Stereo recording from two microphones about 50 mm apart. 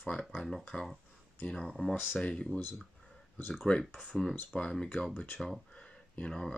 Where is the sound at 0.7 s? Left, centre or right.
Left.